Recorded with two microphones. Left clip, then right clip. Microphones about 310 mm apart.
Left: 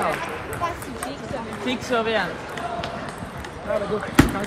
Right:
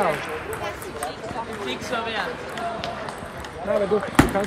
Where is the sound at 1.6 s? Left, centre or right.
Left.